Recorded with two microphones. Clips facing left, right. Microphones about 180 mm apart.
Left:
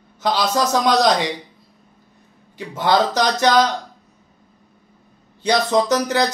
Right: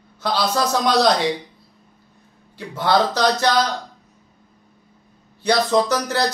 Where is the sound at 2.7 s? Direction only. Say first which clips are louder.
Left 1 dB; 15° left (ahead or behind).